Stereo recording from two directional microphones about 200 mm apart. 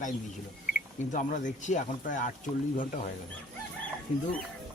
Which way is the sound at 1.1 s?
40° left (ahead or behind).